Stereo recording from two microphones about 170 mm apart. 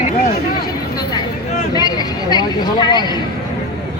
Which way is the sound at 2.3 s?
25° left (ahead or behind).